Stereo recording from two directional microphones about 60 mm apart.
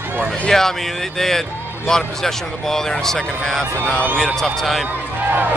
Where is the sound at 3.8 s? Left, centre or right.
Left.